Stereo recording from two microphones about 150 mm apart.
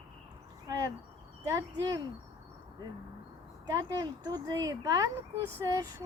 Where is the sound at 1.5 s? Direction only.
20° right (ahead or behind).